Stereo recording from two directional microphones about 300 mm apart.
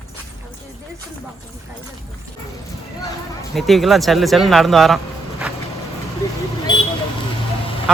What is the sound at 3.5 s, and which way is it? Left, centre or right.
Speech, centre.